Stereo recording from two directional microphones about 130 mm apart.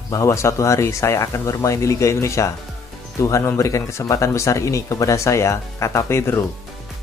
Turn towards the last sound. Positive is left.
turn(degrees=20)  # may be behind; listen again after turning